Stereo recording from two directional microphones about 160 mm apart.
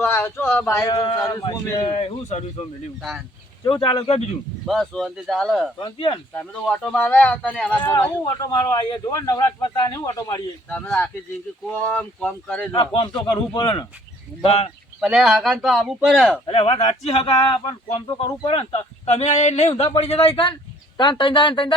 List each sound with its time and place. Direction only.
0.0 s speech: 15° left (ahead or behind)
2.0 s speech: 40° left (ahead or behind)
3.0 s speech: centre (ahead or behind)
3.6 s speech: 30° left (ahead or behind)
4.6 s speech: centre (ahead or behind)
5.8 s speech: 30° left (ahead or behind)
6.3 s speech: 5° left (ahead or behind)
8.2 s speech: 30° left (ahead or behind)
10.7 s speech: 10° left (ahead or behind)
12.7 s speech: 30° left (ahead or behind)
14.4 s speech: 40° left (ahead or behind)
15.0 s speech: centre (ahead or behind)
16.5 s speech: 40° left (ahead or behind)